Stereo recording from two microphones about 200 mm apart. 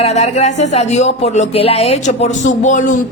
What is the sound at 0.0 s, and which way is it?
A woman's voice, 35° left (ahead or behind).